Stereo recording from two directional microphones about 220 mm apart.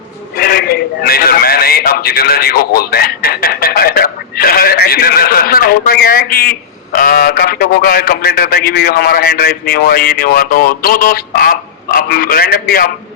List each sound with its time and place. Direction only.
0.3 s a man's voice: 45° left (ahead or behind)